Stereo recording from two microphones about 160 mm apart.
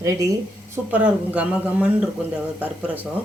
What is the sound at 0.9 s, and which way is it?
A man's voice, 10° right (ahead or behind).